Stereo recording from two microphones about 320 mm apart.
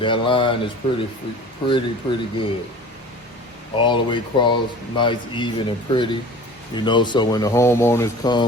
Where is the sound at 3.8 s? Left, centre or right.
Centre.